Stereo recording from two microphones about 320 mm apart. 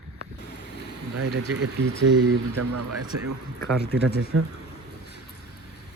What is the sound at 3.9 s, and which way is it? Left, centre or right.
Speech, right.